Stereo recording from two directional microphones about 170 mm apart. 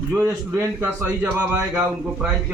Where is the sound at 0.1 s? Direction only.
15° right (ahead or behind).